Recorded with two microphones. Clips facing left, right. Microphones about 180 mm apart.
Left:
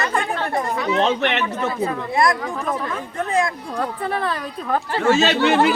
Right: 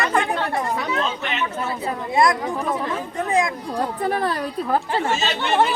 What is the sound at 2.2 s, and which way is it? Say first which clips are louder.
Speech: right 1 dB; 20° right (ahead or behind).